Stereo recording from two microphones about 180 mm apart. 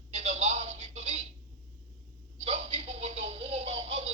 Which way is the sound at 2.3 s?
35° right (ahead or behind).